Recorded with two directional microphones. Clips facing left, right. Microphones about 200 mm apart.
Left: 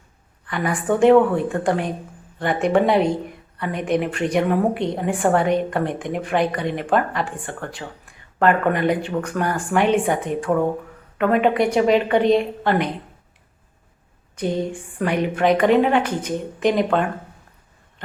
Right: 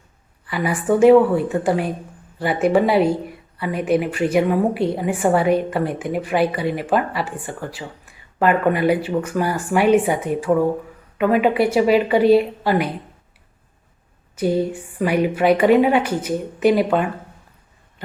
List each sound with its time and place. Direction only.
0.4 s a woman's voice: 5° right (ahead or behind)
14.3 s a woman's voice: 5° right (ahead or behind)